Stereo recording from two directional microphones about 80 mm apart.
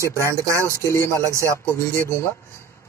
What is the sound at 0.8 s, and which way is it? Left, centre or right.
Speech, left.